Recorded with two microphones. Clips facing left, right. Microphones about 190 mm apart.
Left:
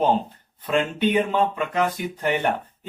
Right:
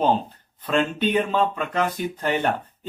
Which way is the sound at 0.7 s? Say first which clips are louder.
Even; 15° left (ahead or behind).